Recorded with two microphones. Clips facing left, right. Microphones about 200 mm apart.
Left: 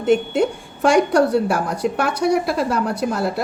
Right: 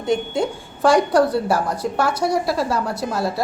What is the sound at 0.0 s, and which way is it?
A woman's voice, 65° left (ahead or behind).